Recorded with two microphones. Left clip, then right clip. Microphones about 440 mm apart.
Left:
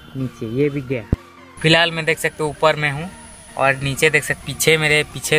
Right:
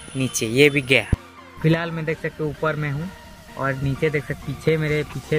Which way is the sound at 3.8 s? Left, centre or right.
Left.